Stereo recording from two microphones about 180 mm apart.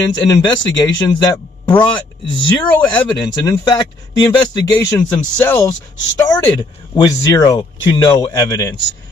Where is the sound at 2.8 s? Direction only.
20° left (ahead or behind).